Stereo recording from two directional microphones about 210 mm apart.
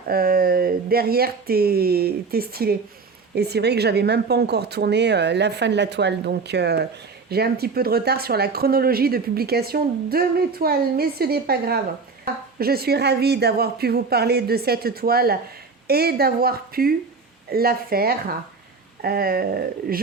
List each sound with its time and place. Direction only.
0.1 s speech: 45° right (ahead or behind)